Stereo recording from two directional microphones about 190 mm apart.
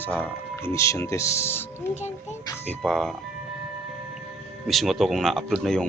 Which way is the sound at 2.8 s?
Centre (ahead or behind).